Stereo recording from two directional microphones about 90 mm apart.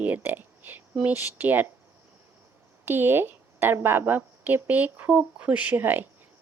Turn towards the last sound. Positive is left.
turn(degrees=-20)  # may be behind; listen again after turning